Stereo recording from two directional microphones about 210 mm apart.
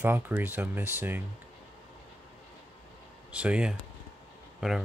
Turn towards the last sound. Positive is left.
turn(degrees=0)  # may be behind; listen again after turning